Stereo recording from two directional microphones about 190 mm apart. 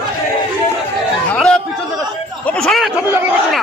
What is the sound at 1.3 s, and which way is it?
Chatter, 5° left (ahead or behind).